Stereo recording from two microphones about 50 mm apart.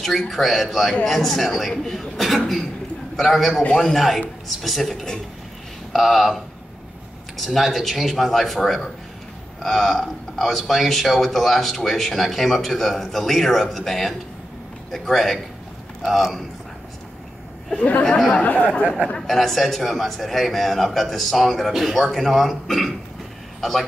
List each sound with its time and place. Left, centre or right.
0.3 s a man's voice: centre
17.7 s speech: left
19.2 s speech: centre